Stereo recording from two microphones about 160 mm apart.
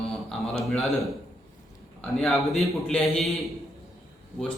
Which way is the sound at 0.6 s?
Centre (ahead or behind).